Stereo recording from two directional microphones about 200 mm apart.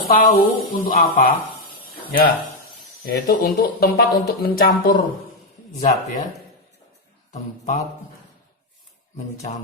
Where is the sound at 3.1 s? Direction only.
50° left (ahead or behind).